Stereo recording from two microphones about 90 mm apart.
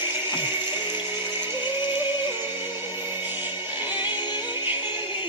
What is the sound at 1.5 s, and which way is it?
Music, 60° left (ahead or behind).